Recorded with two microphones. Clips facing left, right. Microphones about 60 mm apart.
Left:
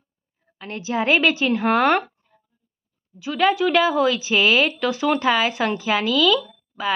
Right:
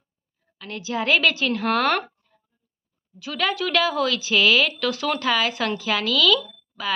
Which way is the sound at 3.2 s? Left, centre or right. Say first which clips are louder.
Left 6 dB; centre.